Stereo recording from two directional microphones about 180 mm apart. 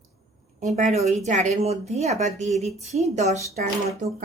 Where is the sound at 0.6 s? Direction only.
40° right (ahead or behind).